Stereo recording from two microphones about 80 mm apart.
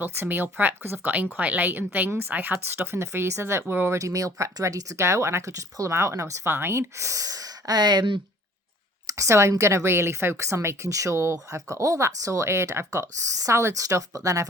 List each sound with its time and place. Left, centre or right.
0.0 s speech: right
3.9 s a woman's voice: right
9.0 s a woman's voice: right